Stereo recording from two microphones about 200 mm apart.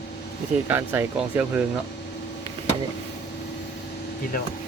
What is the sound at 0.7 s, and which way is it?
Speech, 10° right (ahead or behind).